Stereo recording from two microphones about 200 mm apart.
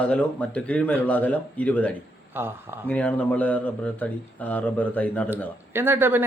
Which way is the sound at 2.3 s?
10° right (ahead or behind).